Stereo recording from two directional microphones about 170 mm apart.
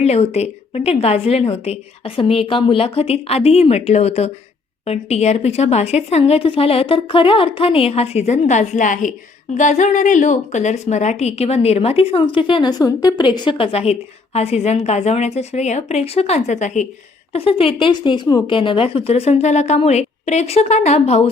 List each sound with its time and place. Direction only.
0.0 s a woman's voice: 40° left (ahead or behind)
17.3 s a woman's voice: 35° left (ahead or behind)